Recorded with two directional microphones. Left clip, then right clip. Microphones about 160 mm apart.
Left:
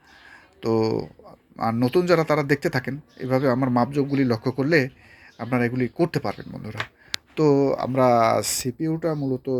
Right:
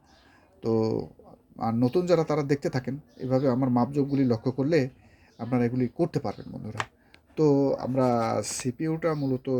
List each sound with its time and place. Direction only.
0.6 s speech: centre (ahead or behind)